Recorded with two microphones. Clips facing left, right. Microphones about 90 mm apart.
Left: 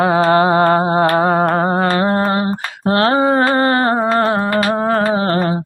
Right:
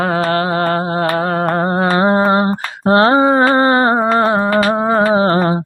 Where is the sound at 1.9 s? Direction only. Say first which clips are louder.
Right 3 dB; 20° right (ahead or behind).